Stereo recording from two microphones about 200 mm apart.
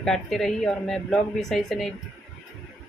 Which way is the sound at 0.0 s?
Centre (ahead or behind).